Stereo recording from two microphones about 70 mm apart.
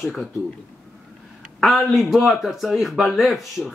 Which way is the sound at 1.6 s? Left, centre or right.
Centre.